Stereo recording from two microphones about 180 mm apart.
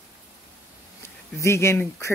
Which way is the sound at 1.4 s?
15° left (ahead or behind).